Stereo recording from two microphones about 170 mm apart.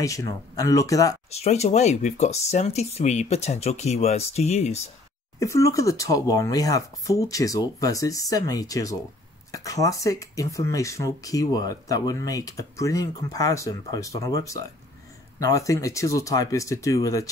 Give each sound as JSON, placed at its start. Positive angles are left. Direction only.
{"t": 0.0, "sound": "speech", "side_deg": 20}
{"t": 1.3, "sound": "speech", "side_deg": 40}
{"t": 5.4, "sound": "speech", "side_deg": 20}